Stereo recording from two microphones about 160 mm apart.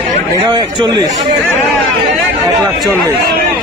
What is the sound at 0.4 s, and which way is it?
Speech, 30° right (ahead or behind).